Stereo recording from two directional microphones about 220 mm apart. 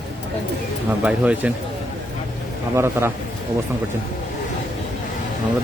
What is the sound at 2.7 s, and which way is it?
Speech, 10° right (ahead or behind).